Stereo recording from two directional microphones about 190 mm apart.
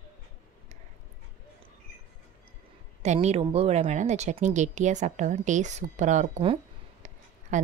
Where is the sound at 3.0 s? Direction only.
35° right (ahead or behind).